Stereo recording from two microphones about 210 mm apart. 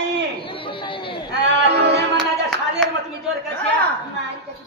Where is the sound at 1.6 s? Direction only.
55° right (ahead or behind).